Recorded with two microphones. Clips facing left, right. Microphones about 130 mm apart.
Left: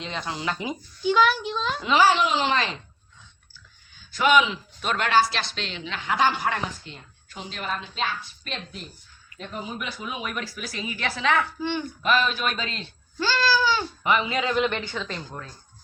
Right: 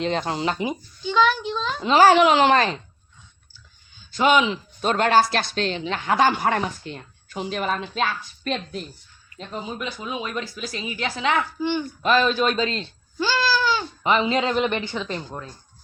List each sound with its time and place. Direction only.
0.0 s speech: 45° right (ahead or behind)
0.5 s speech: 10° right (ahead or behind)
1.0 s a child's voice: 5° left (ahead or behind)
1.8 s a man's voice: 40° right (ahead or behind)
2.0 s speech: 65° right (ahead or behind)
4.1 s speech: 25° right (ahead or behind); by 8.5 s 55° right (ahead or behind)
9.3 s speech: 30° right (ahead or behind)
11.6 s a child's voice: 5° right (ahead or behind)
12.0 s a man's voice: 35° right (ahead or behind)
13.1 s goat: 15° right (ahead or behind)
13.5 s a sound: centre (ahead or behind)
14.0 s speech: 25° right (ahead or behind)